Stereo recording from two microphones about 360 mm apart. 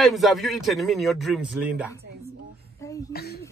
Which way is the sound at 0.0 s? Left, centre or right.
Centre.